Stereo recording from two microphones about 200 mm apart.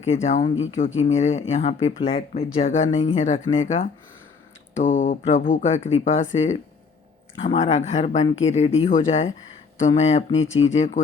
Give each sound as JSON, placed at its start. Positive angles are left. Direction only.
{"t": 0.0, "sound": "speech", "side_deg": 35}
{"t": 4.8, "sound": "speech", "side_deg": 40}
{"t": 10.3, "sound": "speech", "side_deg": 75}
{"t": 10.6, "sound": "speech", "side_deg": 35}